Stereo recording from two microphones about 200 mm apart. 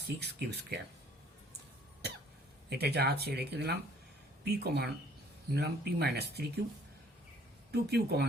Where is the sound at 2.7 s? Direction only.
55° right (ahead or behind).